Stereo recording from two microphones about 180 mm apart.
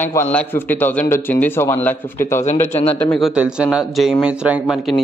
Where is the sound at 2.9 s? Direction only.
5° left (ahead or behind).